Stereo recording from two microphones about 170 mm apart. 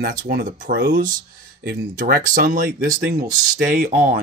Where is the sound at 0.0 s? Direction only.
55° right (ahead or behind).